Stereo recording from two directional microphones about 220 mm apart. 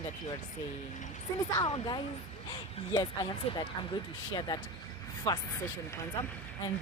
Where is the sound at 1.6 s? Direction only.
20° left (ahead or behind).